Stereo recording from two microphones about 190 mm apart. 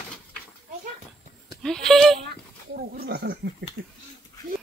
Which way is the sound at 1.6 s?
Centre (ahead or behind).